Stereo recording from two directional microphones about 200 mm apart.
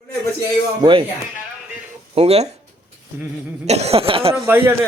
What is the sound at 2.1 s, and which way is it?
Speech, 30° right (ahead or behind).